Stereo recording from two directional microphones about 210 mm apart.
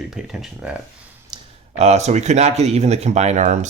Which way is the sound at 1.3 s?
20° right (ahead or behind).